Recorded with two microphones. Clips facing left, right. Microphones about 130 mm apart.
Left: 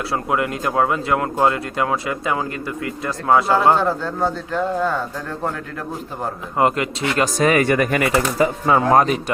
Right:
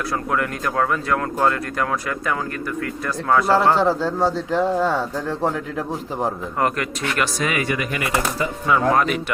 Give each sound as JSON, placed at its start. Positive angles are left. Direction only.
{"t": 0.3, "sound": "speech", "side_deg": 20}
{"t": 3.8, "sound": "speech", "side_deg": -10}
{"t": 6.6, "sound": "speech", "side_deg": 20}
{"t": 7.3, "sound": "speech", "side_deg": 45}
{"t": 8.6, "sound": "speech", "side_deg": 35}